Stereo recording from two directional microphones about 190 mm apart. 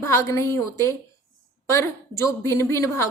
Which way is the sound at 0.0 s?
15° left (ahead or behind).